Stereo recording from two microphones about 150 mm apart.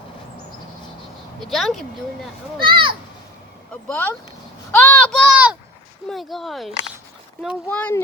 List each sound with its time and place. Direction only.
1.4 s speech: centre (ahead or behind)
2.6 s speech: 35° right (ahead or behind)
3.8 s speech: 10° left (ahead or behind)
4.7 s a sound: 10° left (ahead or behind)
6.1 s speech: centre (ahead or behind)
7.7 s speech: 10° left (ahead or behind)